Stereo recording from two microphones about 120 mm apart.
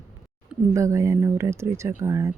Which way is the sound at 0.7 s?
25° right (ahead or behind).